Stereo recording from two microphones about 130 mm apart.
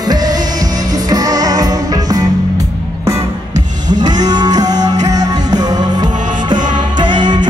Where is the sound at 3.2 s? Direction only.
65° right (ahead or behind).